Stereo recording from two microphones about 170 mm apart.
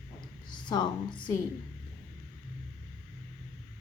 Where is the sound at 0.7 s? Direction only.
25° left (ahead or behind).